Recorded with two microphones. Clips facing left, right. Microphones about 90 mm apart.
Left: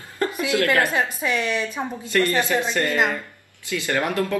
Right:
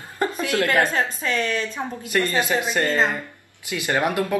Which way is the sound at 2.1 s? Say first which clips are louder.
Left 1 dB; 20° right (ahead or behind).